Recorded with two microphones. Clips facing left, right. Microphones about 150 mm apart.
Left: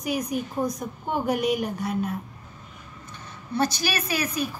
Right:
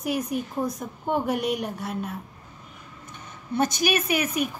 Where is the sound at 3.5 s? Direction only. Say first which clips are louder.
Right 2 dB; 20° right (ahead or behind).